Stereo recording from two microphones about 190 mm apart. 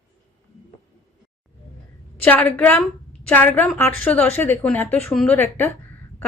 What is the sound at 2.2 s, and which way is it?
A woman's voice, 10° left (ahead or behind).